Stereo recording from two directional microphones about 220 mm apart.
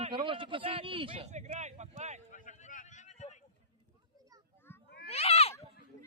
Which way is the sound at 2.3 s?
35° left (ahead or behind).